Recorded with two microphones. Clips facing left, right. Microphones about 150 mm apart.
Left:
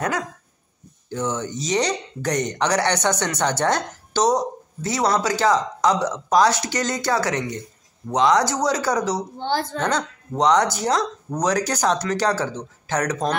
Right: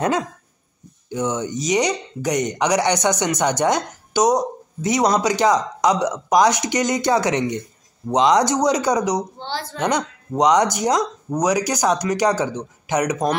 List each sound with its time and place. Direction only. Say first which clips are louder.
1.1 s speech: right 3 dB; 15° right (ahead or behind)
9.4 s a woman's voice: left 5 dB; 50° left (ahead or behind)
9.8 s speech: right 2 dB; 15° right (ahead or behind)